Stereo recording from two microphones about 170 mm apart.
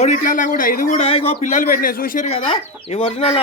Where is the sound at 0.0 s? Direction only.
50° left (ahead or behind).